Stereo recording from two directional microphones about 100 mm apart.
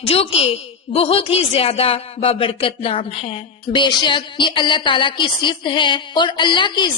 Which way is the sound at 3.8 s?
55° left (ahead or behind).